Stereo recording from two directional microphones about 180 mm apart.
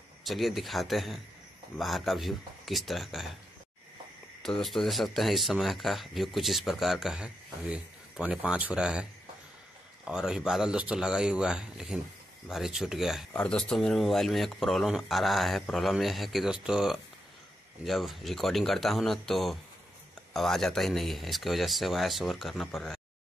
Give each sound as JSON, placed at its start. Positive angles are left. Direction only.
{"t": 0.2, "sound": "speech", "side_deg": 0}
{"t": 4.4, "sound": "speech", "side_deg": 0}
{"t": 10.0, "sound": "speech", "side_deg": -5}